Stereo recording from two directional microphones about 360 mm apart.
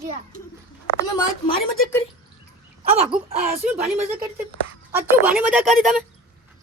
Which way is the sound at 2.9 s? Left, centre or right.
Centre.